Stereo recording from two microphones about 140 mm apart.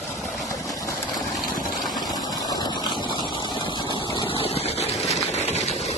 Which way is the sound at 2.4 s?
25° left (ahead or behind).